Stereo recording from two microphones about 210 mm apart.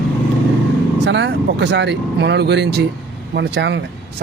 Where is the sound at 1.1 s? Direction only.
55° right (ahead or behind).